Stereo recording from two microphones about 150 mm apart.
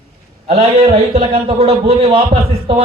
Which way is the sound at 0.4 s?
40° right (ahead or behind).